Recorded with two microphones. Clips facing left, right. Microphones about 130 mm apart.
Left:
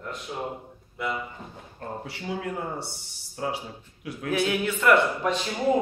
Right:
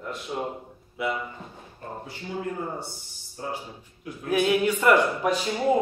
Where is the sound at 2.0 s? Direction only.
75° left (ahead or behind).